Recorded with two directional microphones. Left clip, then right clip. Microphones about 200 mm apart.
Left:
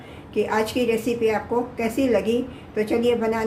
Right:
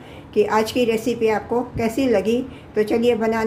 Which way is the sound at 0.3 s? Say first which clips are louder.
Right 4 dB; 20° right (ahead or behind).